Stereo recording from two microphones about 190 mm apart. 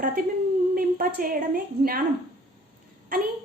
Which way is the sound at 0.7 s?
50° right (ahead or behind).